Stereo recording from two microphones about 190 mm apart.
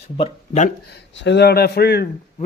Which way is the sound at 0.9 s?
65° left (ahead or behind).